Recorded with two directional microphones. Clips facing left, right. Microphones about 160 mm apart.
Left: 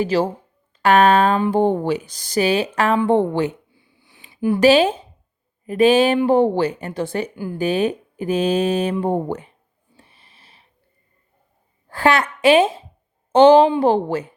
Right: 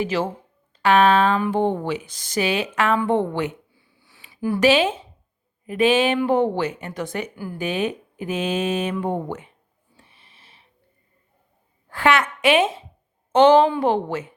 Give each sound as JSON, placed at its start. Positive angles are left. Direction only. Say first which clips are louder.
{"t": 0.0, "sound": "speech", "louder": "left 4 dB", "side_deg": 35}
{"t": 0.8, "sound": "a sound", "louder": "left 2 dB", "side_deg": 45}
{"t": 1.4, "sound": "speech", "louder": "left 4 dB", "side_deg": 35}
{"t": 4.3, "sound": "a sound", "louder": "left 4 dB", "side_deg": 20}
{"t": 4.6, "sound": "speech", "louder": "left 4 dB", "side_deg": 40}
{"t": 10.0, "sound": "snort", "louder": "left 2 dB", "side_deg": 40}
{"t": 11.9, "sound": "a woman's voice", "louder": "left 2 dB", "side_deg": 35}